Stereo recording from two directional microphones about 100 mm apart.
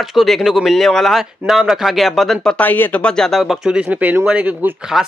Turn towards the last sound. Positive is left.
turn(degrees=-15)  # may be behind; listen again after turning